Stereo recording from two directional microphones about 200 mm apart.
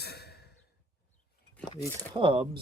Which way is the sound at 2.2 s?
25° right (ahead or behind).